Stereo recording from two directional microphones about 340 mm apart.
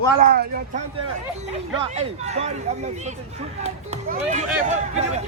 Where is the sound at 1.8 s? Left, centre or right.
Centre.